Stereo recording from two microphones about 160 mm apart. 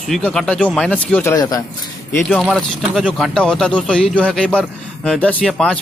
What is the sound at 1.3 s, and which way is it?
Speech, 25° left (ahead or behind).